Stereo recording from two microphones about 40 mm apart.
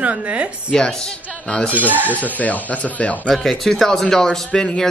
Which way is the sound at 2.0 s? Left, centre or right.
Left.